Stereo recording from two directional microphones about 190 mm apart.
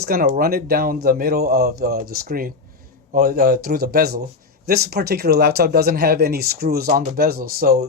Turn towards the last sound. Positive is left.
turn(degrees=-50)  # may be behind; listen again after turning